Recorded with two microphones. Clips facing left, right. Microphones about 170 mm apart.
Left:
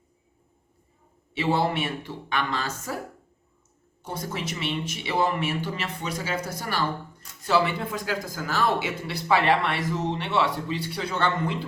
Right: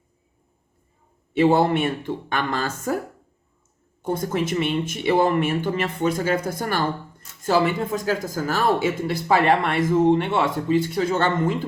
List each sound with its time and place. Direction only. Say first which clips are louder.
1.3 s speech: right 7 dB; 50° right (ahead or behind)
4.0 s speech: right 9 dB; 50° right (ahead or behind)